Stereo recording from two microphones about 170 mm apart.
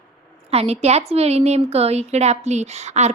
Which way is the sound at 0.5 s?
40° right (ahead or behind).